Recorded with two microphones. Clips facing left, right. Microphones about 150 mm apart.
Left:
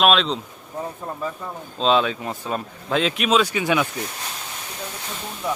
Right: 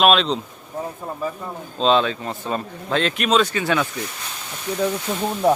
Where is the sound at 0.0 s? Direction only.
Centre (ahead or behind).